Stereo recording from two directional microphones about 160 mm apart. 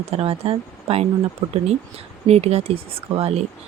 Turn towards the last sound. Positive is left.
turn(degrees=-40)  # may be behind; listen again after turning